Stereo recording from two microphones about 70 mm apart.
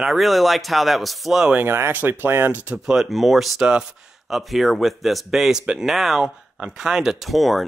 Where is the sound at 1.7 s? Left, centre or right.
Right.